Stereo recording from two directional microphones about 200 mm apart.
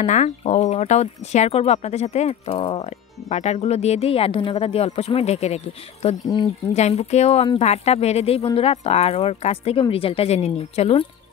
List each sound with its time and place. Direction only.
0.0 s speech: 35° left (ahead or behind)